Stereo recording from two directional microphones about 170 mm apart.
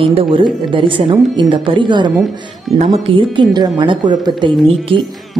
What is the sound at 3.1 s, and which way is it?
A woman's voice, 25° right (ahead or behind).